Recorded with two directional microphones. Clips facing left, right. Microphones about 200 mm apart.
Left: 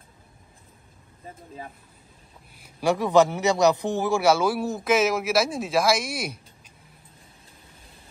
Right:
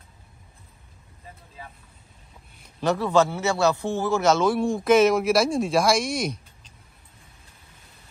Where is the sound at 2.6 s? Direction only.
10° left (ahead or behind).